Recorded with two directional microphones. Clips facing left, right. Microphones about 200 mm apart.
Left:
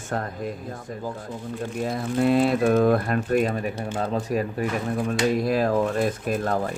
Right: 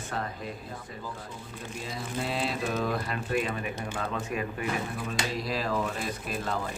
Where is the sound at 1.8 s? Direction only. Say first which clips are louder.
Left 12 dB; 55° left (ahead or behind).